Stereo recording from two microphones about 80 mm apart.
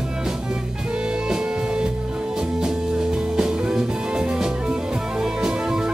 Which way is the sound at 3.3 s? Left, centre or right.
Centre.